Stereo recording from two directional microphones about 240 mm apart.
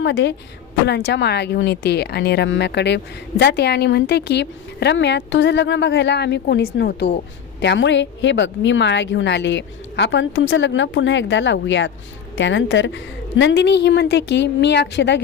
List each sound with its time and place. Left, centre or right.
0.0 s speech: left